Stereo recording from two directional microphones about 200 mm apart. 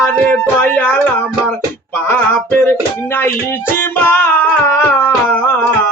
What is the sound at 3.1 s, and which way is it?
Music, 10° left (ahead or behind).